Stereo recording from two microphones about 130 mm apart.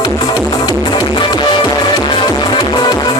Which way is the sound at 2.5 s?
35° left (ahead or behind).